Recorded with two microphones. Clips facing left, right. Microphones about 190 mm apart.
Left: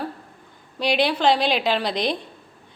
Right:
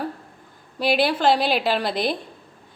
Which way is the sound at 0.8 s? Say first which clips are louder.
Right 1 dB; 5° right (ahead or behind).